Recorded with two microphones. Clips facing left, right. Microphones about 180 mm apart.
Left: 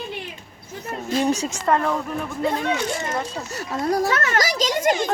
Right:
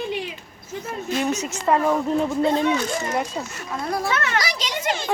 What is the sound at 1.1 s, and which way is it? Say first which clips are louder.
Speech: left 3 dB; 30° left (ahead or behind).